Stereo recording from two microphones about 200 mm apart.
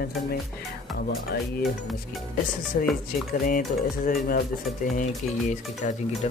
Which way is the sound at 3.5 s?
40° left (ahead or behind).